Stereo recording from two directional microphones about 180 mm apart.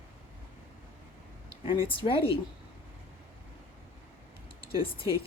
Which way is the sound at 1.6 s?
30° left (ahead or behind).